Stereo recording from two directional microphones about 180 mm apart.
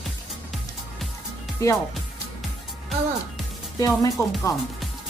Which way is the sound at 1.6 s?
20° left (ahead or behind).